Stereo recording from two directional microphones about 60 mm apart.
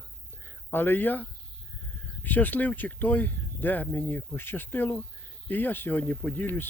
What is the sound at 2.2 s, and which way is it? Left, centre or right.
Speech, left.